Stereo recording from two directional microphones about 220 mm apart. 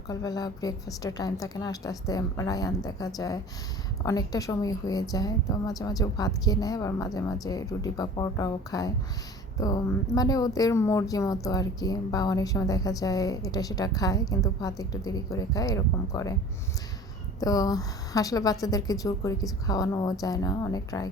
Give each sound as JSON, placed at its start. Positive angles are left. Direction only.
{"t": 0.1, "sound": "speech", "side_deg": 15}
{"t": 17.4, "sound": "speech", "side_deg": 15}